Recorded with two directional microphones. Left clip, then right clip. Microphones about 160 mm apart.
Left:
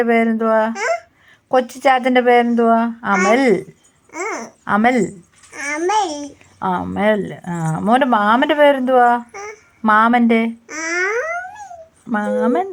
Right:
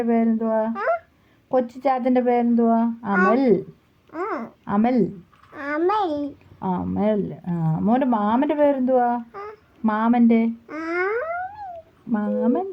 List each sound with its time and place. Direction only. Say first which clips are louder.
0.1 s speech: left 7 dB; 45° left (ahead or behind)
1.8 s a woman's voice: left 8 dB; 35° left (ahead or behind)
3.1 s speech: left 4 dB; 20° left (ahead or behind)
3.3 s a woman's voice: left 5 dB; 30° left (ahead or behind)
4.1 s babbling: left 3 dB; centre (ahead or behind)
4.6 s a child's voice: left 7 dB; 30° left (ahead or behind)
6.0 s a child's voice: left 4 dB; centre (ahead or behind)
6.6 s speech: left 7 dB; 25° left (ahead or behind)
9.3 s child singing: left 4 dB; centre (ahead or behind)
9.8 s speech: left 8 dB; 25° left (ahead or behind)
10.7 s a child's voice: left 6 dB; 5° left (ahead or behind)
12.1 s speech: left 6 dB; 30° left (ahead or behind)